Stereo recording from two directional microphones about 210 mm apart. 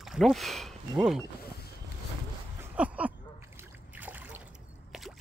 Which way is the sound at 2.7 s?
5° right (ahead or behind).